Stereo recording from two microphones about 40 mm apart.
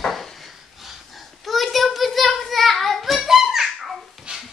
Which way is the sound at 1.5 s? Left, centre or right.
Centre.